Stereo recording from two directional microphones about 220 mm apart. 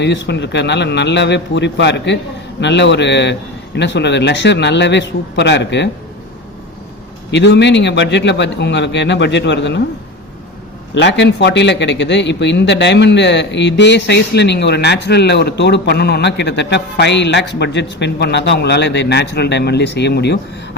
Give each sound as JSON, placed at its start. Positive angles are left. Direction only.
{"t": 0.0, "sound": "a man's voice", "side_deg": 50}
{"t": 7.3, "sound": "a man's voice", "side_deg": 50}
{"t": 10.9, "sound": "a man's voice", "side_deg": 50}